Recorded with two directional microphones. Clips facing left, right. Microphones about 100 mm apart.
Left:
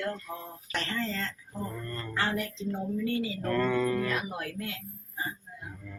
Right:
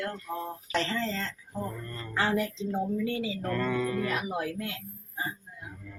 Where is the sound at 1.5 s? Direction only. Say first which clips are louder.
Right 1 dB; 10° right (ahead or behind).